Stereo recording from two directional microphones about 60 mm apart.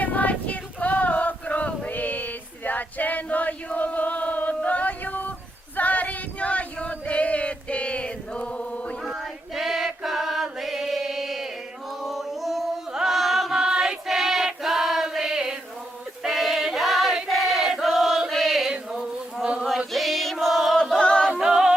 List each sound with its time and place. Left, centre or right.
0.0 s female singing: left
5.7 s choir: left
9.0 s choir: centre
12.0 s chant: centre
16.2 s choir: centre
18.9 s a sound: centre
19.9 s choir: centre
21.3 s a capella: centre